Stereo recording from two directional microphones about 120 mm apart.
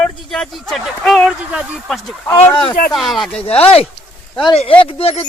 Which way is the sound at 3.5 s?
55° left (ahead or behind).